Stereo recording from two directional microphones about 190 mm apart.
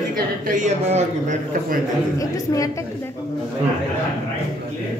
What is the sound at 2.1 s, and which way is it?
Speech, 15° left (ahead or behind).